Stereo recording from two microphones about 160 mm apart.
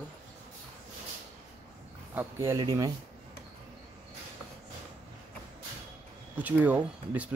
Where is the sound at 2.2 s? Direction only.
15° right (ahead or behind).